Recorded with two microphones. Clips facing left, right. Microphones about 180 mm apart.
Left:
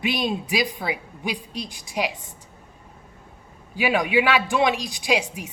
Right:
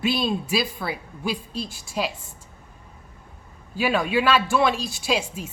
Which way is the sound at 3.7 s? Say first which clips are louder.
Left 1 dB; 15° left (ahead or behind).